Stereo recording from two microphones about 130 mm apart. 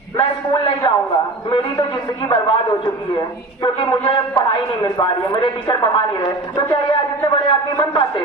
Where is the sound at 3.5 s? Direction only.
40° left (ahead or behind).